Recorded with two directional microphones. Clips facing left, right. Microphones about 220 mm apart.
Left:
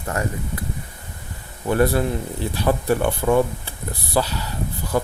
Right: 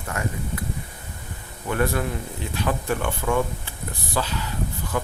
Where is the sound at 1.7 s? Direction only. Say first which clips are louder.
Left 5 dB; 35° left (ahead or behind).